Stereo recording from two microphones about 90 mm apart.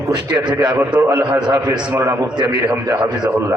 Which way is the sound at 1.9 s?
30° right (ahead or behind).